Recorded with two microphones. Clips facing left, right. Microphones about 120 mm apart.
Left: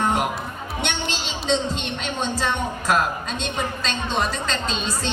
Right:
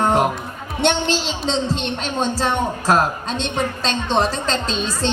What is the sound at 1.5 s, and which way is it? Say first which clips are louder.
Speech: right 1 dB; 30° right (ahead or behind).